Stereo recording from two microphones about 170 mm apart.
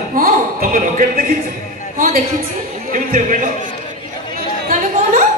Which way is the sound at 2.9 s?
50° right (ahead or behind).